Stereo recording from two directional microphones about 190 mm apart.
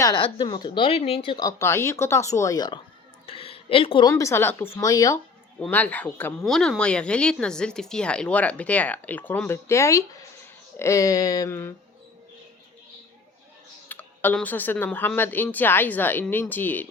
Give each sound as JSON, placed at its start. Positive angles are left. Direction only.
{"t": 0.0, "sound": "speech", "side_deg": 25}
{"t": 4.1, "sound": "speech", "side_deg": 15}
{"t": 5.5, "sound": "speech", "side_deg": 5}
{"t": 13.8, "sound": "speech", "side_deg": 10}